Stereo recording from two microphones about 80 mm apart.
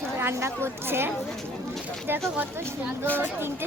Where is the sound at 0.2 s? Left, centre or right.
Right.